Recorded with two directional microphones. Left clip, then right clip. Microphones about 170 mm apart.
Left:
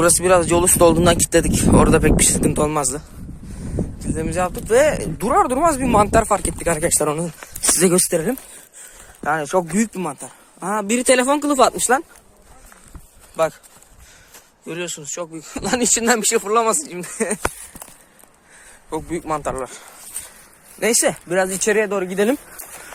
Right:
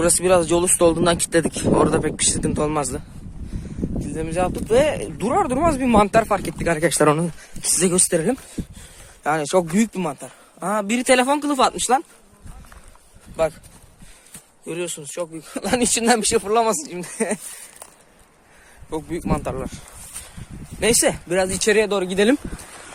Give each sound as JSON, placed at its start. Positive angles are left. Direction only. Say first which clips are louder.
{"t": 0.0, "sound": "speech", "louder": "left 2 dB", "side_deg": 0}
{"t": 1.8, "sound": "speech", "louder": "left 5 dB", "side_deg": 15}
{"t": 2.6, "sound": "speech", "louder": "left 2 dB", "side_deg": -5}
{"t": 4.0, "sound": "speech", "louder": "left 1 dB", "side_deg": 0}
{"t": 5.8, "sound": "speech", "louder": "left 1 dB", "side_deg": -25}
{"t": 7.0, "sound": "speech", "louder": "right 4 dB", "side_deg": -40}
{"t": 8.1, "sound": "speech", "louder": "even", "side_deg": -25}
{"t": 14.7, "sound": "speech", "louder": "left 1 dB", "side_deg": 0}
{"t": 15.5, "sound": "speech", "louder": "left 1 dB", "side_deg": -15}
{"t": 18.9, "sound": "speech", "louder": "left 2 dB", "side_deg": 0}
{"t": 20.8, "sound": "speech", "louder": "even", "side_deg": -10}
{"t": 21.2, "sound": "speech", "louder": "left 1 dB", "side_deg": 0}
{"t": 21.8, "sound": "speech", "louder": "even", "side_deg": -20}
{"t": 22.1, "sound": "speech", "louder": "right 2 dB", "side_deg": -35}